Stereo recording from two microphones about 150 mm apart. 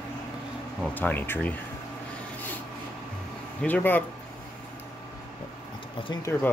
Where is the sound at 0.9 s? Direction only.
10° left (ahead or behind).